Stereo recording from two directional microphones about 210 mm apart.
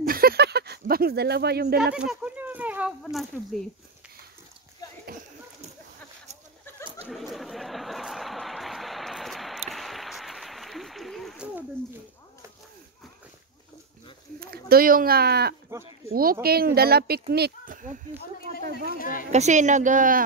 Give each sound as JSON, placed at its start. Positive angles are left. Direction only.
{"t": 0.0, "sound": "a sound", "side_deg": -45}
{"t": 2.0, "sound": "speech", "side_deg": -5}
{"t": 7.1, "sound": "a sound", "side_deg": 0}
{"t": 14.4, "sound": "speech", "side_deg": -45}
{"t": 18.9, "sound": "a woman's voice", "side_deg": 40}
{"t": 19.3, "sound": "speech", "side_deg": -35}